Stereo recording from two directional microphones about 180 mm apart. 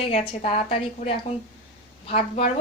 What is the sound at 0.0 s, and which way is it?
A woman's voice, 35° left (ahead or behind).